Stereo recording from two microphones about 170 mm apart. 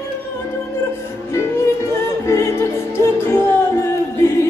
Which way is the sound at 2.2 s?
15° left (ahead or behind).